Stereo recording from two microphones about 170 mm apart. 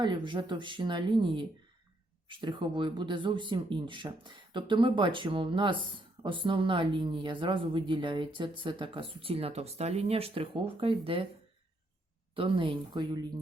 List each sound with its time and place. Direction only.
0.0 s speech: 25° right (ahead or behind)
12.4 s speech: 30° right (ahead or behind)